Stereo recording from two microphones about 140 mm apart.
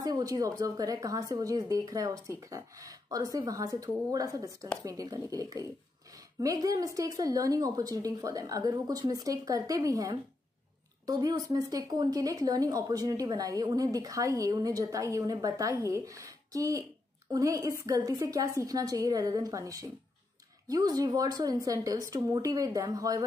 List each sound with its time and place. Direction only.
0.0 s speech: 25° right (ahead or behind)